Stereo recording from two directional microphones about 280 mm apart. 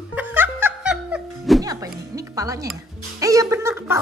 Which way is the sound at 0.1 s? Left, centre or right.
Centre.